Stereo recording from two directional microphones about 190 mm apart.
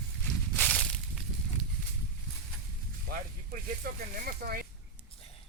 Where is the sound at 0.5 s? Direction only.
5° left (ahead or behind).